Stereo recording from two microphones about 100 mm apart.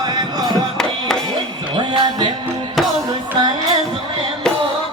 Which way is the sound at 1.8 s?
45° right (ahead or behind).